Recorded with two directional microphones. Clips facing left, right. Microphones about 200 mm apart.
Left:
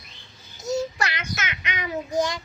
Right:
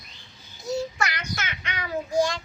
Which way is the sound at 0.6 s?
40° left (ahead or behind).